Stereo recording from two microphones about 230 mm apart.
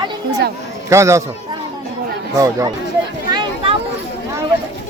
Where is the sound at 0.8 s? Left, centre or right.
Centre.